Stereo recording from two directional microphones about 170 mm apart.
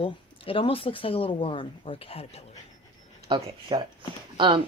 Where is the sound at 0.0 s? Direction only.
30° left (ahead or behind).